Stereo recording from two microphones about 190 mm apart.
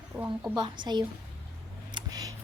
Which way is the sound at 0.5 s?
25° right (ahead or behind).